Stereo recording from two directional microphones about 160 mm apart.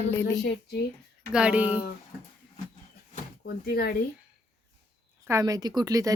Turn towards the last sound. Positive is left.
turn(degrees=-20)  # may be behind; listen again after turning